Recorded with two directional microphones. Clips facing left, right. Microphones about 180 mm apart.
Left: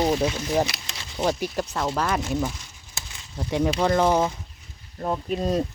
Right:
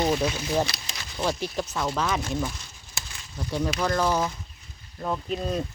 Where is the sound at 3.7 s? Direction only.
25° left (ahead or behind).